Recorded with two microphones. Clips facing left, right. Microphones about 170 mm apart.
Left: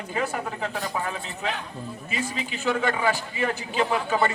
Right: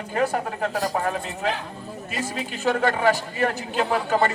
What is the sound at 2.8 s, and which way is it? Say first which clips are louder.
Speech: right 5 dB; 65° right (ahead or behind).